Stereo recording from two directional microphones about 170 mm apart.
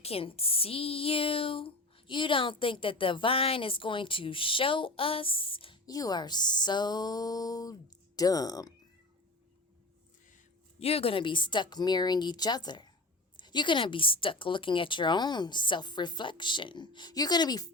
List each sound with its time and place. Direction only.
0.0 s speech: 35° left (ahead or behind)
10.8 s a woman's voice: 35° left (ahead or behind)